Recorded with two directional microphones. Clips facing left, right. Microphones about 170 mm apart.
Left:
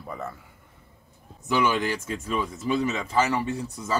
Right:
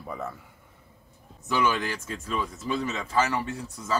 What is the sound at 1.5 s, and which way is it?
Speech, 15° left (ahead or behind).